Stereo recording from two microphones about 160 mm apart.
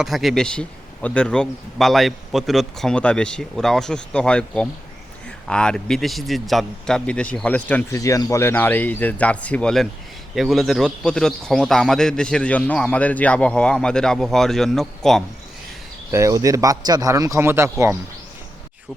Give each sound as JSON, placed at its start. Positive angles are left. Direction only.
{"t": 0.0, "sound": "a man's voice", "side_deg": 0}
{"t": 7.9, "sound": "a man's voice", "side_deg": 20}
{"t": 16.1, "sound": "speech", "side_deg": -20}